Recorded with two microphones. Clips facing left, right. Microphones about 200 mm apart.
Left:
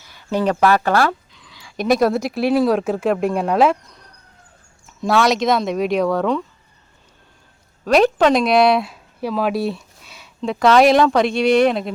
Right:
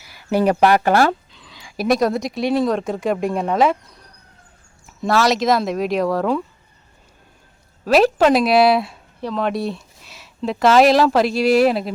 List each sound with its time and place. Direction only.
0.1 s a sound: 10° right (ahead or behind)
0.6 s speech: 15° right (ahead or behind)
0.9 s a sound: 30° right (ahead or behind)
1.7 s speech: centre (ahead or behind)
4.9 s speech: centre (ahead or behind)
7.9 s speech: 5° right (ahead or behind)